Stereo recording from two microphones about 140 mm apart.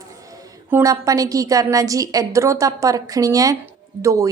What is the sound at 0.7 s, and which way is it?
A woman's voice, 25° right (ahead or behind).